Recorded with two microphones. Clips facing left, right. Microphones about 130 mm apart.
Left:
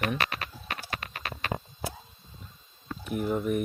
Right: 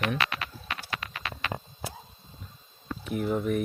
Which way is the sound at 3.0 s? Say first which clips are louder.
Even; centre (ahead or behind).